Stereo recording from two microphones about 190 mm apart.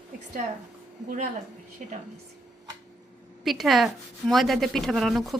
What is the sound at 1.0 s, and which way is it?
Speech, 40° right (ahead or behind).